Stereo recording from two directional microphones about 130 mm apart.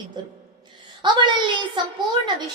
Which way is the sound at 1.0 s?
35° right (ahead or behind).